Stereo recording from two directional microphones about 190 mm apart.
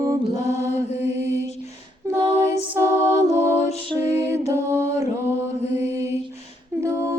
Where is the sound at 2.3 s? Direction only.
35° left (ahead or behind).